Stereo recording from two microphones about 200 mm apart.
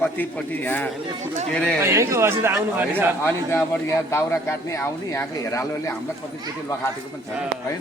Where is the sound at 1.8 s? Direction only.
15° right (ahead or behind).